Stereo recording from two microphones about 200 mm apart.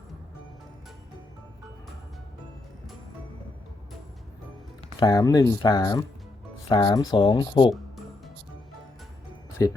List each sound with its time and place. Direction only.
4.9 s speech: 20° left (ahead or behind)
9.6 s speech: 20° left (ahead or behind)